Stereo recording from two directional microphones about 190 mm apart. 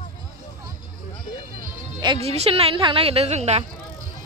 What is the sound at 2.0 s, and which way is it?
A woman's voice, 30° right (ahead or behind).